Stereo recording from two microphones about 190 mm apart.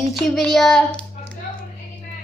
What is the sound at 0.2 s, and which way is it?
Speech, 5° left (ahead or behind).